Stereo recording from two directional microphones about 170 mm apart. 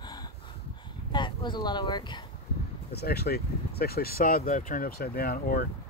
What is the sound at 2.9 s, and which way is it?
Speech, 70° left (ahead or behind).